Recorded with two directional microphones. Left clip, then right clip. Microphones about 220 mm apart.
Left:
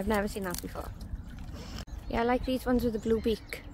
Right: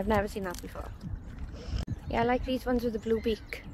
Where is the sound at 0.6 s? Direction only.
Centre (ahead or behind).